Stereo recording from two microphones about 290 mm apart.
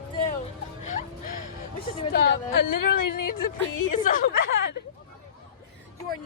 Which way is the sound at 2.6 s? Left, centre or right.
Left.